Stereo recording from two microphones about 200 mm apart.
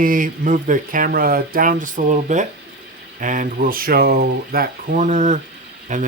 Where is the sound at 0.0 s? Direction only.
45° right (ahead or behind).